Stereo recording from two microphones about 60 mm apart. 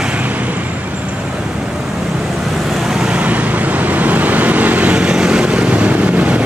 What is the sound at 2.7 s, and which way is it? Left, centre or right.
Vehicle, centre.